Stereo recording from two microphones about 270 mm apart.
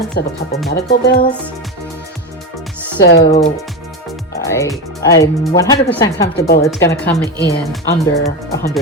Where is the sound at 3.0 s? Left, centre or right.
Left.